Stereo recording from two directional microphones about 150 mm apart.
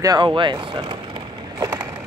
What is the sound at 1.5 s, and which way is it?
Skateboard, 20° right (ahead or behind).